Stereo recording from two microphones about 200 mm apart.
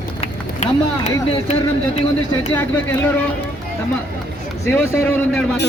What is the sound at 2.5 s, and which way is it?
Speech, 10° left (ahead or behind).